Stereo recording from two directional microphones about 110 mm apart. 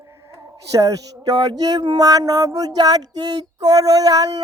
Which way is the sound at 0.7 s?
35° right (ahead or behind).